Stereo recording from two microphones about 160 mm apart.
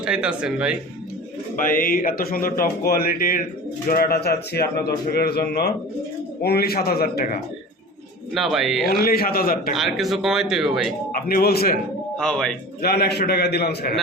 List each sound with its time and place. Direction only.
0.0 s speech: 5° right (ahead or behind)
1.6 s speech: 60° left (ahead or behind)
8.3 s speech: centre (ahead or behind)
8.9 s speech: 70° left (ahead or behind)
9.7 s speech: centre (ahead or behind)
11.1 s speech: 65° left (ahead or behind)
12.1 s speech: 5° left (ahead or behind)
12.8 s a man's voice: 80° left